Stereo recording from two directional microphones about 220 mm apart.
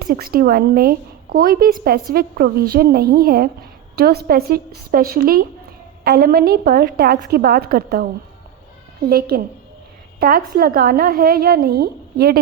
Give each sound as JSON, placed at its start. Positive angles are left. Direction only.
{"t": 0.0, "sound": "a woman's voice", "side_deg": -45}